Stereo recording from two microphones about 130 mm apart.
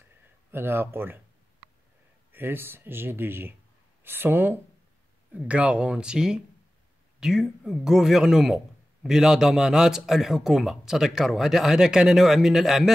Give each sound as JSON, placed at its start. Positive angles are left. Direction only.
{"t": 0.5, "sound": "speech", "side_deg": -15}
{"t": 2.3, "sound": "a man's voice", "side_deg": -15}